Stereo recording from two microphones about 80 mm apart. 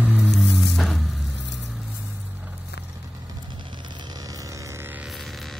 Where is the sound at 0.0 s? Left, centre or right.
Right.